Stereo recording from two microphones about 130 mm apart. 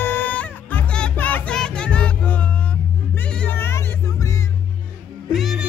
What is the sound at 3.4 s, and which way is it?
Vehicle, 15° left (ahead or behind).